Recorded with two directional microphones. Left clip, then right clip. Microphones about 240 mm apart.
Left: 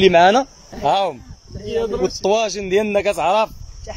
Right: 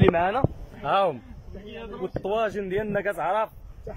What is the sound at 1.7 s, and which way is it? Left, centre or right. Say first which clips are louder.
Speech: left 16 dB; left.